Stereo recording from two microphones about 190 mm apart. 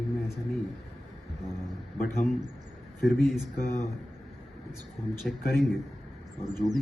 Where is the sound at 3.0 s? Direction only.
Centre (ahead or behind).